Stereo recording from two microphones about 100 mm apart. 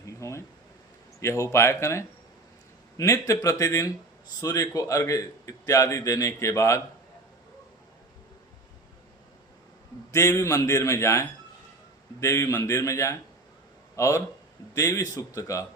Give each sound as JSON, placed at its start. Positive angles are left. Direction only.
{"t": 0.0, "sound": "a sound", "side_deg": 30}
{"t": 1.2, "sound": "a man's voice", "side_deg": 30}
{"t": 10.1, "sound": "a man's voice", "side_deg": 30}